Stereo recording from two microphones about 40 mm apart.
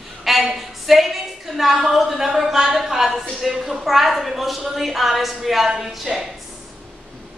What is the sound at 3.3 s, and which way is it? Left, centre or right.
A woman's voice, centre.